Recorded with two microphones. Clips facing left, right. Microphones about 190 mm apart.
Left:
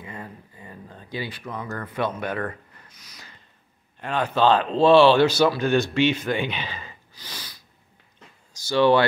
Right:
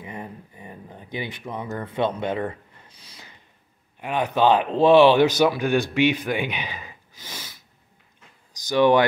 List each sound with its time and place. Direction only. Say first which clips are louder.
0.0 s speech: right 2 dB; 20° right (ahead or behind)
4.0 s speech: right 1 dB; 15° right (ahead or behind)